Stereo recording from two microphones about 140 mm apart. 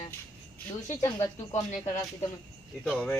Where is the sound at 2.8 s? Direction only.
10° left (ahead or behind).